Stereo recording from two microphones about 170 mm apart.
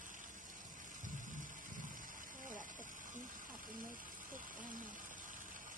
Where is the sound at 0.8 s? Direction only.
50° right (ahead or behind).